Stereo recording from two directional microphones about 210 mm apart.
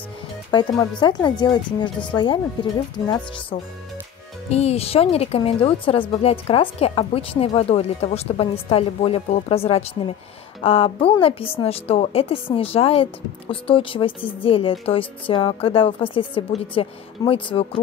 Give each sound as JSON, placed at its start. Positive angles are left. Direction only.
{"t": 0.5, "sound": "a woman's voice", "side_deg": 20}